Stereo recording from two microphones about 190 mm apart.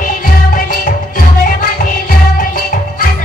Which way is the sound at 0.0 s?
45° left (ahead or behind).